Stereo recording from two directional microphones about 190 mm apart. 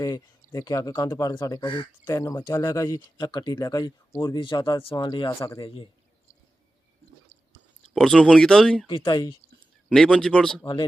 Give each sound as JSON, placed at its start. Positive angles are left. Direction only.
{"t": 0.0, "sound": "speech", "side_deg": 20}
{"t": 5.6, "sound": "speech", "side_deg": 30}
{"t": 7.9, "sound": "speech", "side_deg": 5}
{"t": 8.9, "sound": "speech", "side_deg": 25}
{"t": 9.9, "sound": "speech", "side_deg": 5}
{"t": 10.6, "sound": "speech", "side_deg": 20}